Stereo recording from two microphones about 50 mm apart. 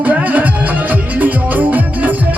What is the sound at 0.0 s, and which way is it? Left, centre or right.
Music, right.